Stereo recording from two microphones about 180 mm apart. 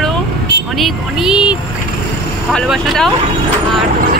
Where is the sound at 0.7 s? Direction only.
Centre (ahead or behind).